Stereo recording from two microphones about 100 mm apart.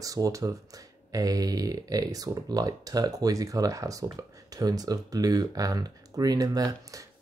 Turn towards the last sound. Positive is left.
turn(degrees=-35)  # may be behind; listen again after turning